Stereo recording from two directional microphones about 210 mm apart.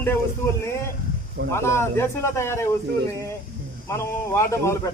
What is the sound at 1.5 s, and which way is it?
Speech, 10° left (ahead or behind).